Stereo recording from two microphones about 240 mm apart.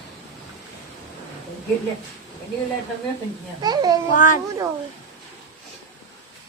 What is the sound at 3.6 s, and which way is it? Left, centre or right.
Speech, centre.